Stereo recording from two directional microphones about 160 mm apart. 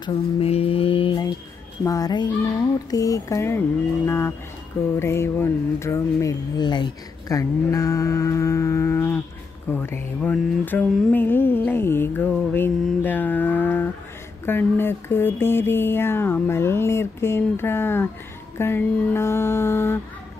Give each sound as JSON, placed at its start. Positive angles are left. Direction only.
{"t": 0.0, "sound": "a sound", "side_deg": 35}
{"t": 1.9, "sound": "a child's voice", "side_deg": 25}
{"t": 10.3, "sound": "mantra", "side_deg": 10}
{"t": 14.4, "sound": "speech", "side_deg": 15}